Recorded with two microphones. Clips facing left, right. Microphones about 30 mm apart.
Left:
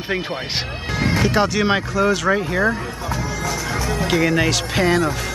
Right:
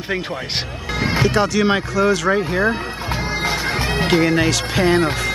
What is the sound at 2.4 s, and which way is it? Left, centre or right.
Speech, centre.